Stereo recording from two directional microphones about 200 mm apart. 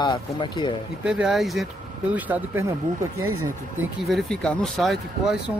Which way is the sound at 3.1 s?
90° right.